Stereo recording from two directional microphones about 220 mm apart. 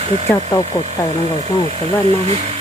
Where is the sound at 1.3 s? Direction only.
30° right (ahead or behind).